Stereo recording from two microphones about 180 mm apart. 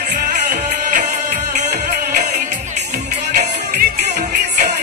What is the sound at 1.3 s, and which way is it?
Music, 45° right (ahead or behind).